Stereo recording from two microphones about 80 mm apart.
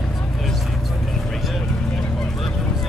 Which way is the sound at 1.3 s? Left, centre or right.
Centre.